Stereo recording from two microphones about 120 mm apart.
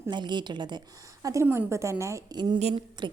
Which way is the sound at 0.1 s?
40° right (ahead or behind).